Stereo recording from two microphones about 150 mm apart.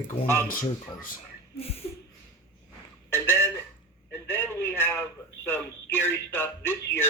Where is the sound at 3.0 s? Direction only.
15° left (ahead or behind).